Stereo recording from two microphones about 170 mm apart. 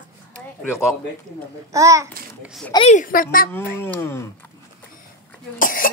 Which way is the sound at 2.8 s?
50° left (ahead or behind).